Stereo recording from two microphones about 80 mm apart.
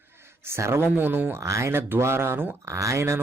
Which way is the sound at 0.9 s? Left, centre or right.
Right.